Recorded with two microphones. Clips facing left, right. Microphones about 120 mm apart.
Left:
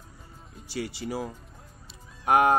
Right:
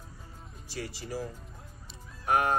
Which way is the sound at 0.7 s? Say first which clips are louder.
Left 5 dB; 75° left (ahead or behind).